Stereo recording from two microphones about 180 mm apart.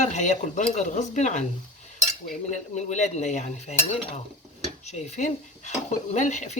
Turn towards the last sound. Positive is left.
turn(degrees=40)  # may be behind; listen again after turning